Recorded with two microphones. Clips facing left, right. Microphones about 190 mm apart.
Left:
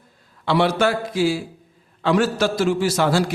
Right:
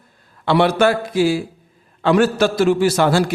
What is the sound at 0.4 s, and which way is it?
A man's voice, 60° right (ahead or behind).